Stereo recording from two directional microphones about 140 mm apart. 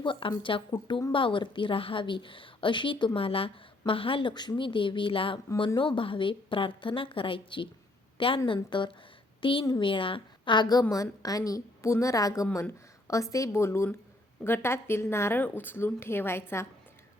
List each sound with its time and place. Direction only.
0.0 s a woman's voice: 35° left (ahead or behind); by 16.6 s 15° left (ahead or behind)